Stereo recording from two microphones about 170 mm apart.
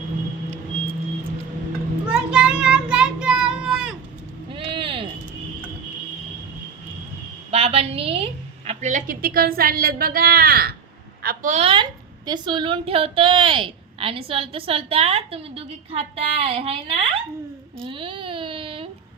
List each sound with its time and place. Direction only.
2.0 s child singing: 5° right (ahead or behind)
4.5 s vehicle: 30° right (ahead or behind)
7.5 s a sound: 35° right (ahead or behind); by 11.5 s 60° right (ahead or behind)
11.5 s a woman's voice: 35° right (ahead or behind)
17.8 s baby cry: 30° right (ahead or behind)